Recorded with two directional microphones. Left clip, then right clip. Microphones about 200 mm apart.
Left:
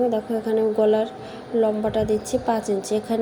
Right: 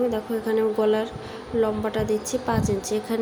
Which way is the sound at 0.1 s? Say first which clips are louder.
Left 2 dB; 5° left (ahead or behind).